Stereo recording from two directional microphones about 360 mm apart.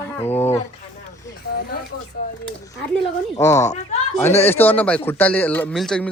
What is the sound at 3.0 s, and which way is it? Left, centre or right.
Speech, centre.